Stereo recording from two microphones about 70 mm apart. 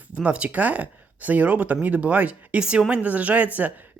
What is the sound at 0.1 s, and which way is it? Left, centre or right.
Speech, centre.